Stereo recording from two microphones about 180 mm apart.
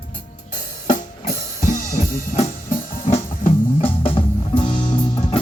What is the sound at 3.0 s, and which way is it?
Music, 35° left (ahead or behind).